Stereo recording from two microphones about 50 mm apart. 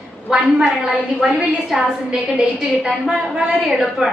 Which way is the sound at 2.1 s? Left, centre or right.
Centre.